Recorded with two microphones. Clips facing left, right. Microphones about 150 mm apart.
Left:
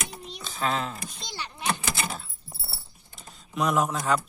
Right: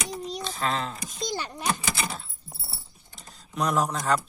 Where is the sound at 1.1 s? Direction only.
45° right (ahead or behind).